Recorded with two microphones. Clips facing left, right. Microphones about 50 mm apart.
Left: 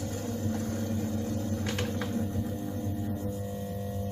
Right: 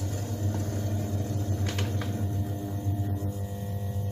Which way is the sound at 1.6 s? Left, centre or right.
Centre.